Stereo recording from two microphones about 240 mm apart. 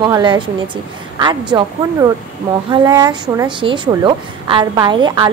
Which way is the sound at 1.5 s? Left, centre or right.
Centre.